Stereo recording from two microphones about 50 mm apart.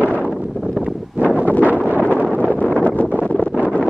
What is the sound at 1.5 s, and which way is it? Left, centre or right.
Wind noise, left.